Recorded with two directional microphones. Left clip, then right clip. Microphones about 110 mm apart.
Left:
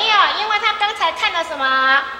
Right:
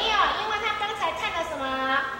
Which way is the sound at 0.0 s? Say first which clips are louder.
Left 8 dB; 35° left (ahead or behind).